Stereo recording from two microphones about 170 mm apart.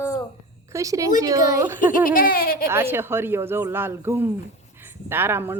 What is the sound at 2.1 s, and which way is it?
Laughter, 55° left (ahead or behind).